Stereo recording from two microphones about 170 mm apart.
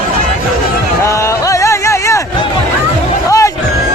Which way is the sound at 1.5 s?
20° left (ahead or behind).